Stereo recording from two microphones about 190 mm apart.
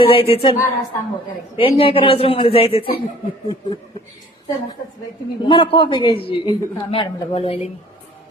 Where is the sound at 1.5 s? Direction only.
30° left (ahead or behind).